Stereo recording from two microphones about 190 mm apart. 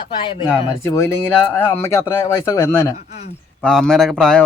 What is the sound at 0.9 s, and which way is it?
Speech, 15° left (ahead or behind).